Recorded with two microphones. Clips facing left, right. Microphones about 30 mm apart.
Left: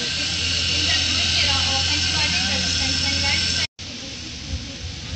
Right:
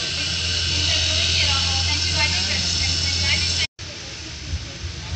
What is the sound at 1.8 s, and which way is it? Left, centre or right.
Vehicle, left.